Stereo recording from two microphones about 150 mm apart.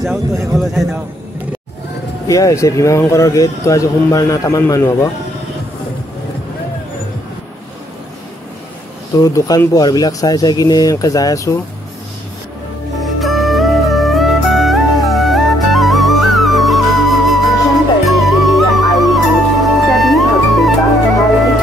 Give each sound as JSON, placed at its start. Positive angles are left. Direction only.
{"t": 0.0, "sound": "speech", "side_deg": 0}
{"t": 2.2, "sound": "speech", "side_deg": 20}
{"t": 9.2, "sound": "speech", "side_deg": 20}
{"t": 13.0, "sound": "music", "side_deg": 0}